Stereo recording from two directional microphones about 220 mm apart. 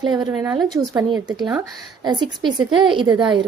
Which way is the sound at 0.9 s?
15° right (ahead or behind).